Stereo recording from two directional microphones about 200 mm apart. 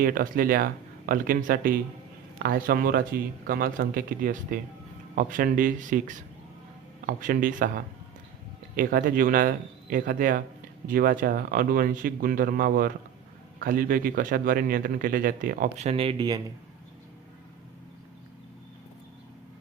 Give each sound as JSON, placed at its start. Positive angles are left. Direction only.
{"t": 0.0, "sound": "a man's voice", "side_deg": -45}